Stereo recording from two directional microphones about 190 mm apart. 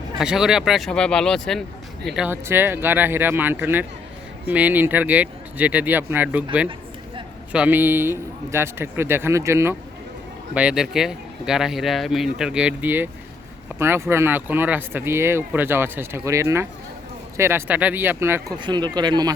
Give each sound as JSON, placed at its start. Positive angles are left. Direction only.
{"t": 0.2, "sound": "speech", "side_deg": -5}
{"t": 18.6, "sound": "speech", "side_deg": -20}